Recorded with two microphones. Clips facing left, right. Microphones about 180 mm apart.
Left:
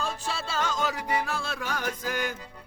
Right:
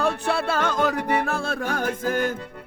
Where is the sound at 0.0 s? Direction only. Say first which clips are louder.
Right 9 dB; 60° right (ahead or behind).